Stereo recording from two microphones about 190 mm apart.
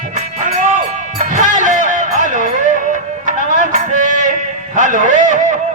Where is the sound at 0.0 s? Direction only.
40° right (ahead or behind).